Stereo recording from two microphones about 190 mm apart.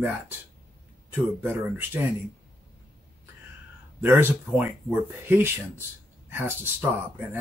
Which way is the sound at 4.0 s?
10° right (ahead or behind).